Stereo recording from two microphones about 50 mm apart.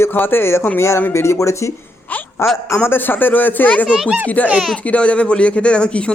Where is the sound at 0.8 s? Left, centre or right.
Left.